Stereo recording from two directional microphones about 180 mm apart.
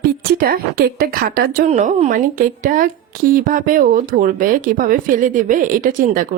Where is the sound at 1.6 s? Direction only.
40° right (ahead or behind).